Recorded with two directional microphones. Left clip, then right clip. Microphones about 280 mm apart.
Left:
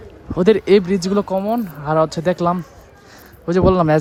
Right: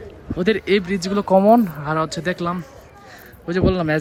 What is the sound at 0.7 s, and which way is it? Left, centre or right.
Speech, centre.